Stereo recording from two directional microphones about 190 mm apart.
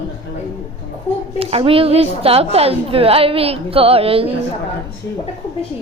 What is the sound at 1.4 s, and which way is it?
A woman's voice, 30° right (ahead or behind).